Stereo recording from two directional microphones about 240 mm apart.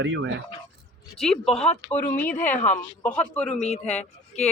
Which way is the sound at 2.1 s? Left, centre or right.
Centre.